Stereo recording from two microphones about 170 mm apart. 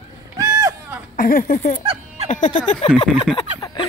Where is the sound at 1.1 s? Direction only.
55° left (ahead or behind).